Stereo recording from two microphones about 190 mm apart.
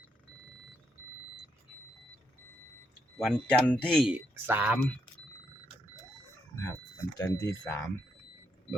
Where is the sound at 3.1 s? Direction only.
5° left (ahead or behind).